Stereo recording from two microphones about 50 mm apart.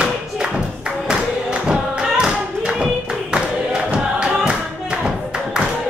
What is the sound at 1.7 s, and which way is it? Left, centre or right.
Tap, centre.